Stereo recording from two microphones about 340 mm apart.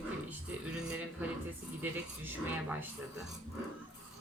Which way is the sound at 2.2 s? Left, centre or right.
Centre.